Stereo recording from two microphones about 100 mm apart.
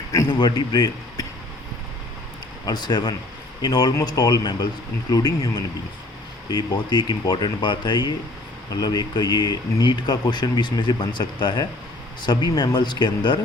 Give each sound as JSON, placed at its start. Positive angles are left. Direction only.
{"t": 0.3, "sound": "speech", "side_deg": 50}
{"t": 2.6, "sound": "speech", "side_deg": 45}